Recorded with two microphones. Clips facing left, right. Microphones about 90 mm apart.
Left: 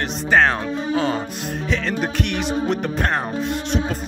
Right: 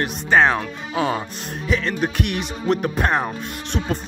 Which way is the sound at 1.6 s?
Centre (ahead or behind).